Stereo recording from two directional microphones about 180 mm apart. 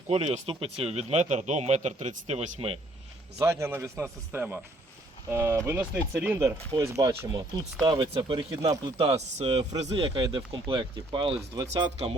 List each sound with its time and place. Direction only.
0.1 s speech: 35° right (ahead or behind)
3.3 s speech: 15° right (ahead or behind); by 12.1 s 35° right (ahead or behind)